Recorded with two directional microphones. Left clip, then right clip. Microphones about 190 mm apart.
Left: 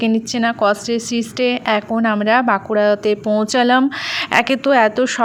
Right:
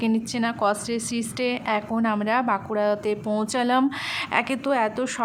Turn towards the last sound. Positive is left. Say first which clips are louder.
# left 10 dB
turn(degrees=25)  # may be behind; listen again after turning